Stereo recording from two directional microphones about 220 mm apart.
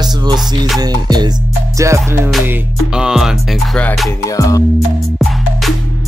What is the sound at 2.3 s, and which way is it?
Music, centre (ahead or behind).